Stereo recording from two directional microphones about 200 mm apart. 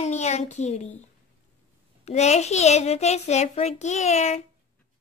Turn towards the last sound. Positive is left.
turn(degrees=35)  # may be behind; listen again after turning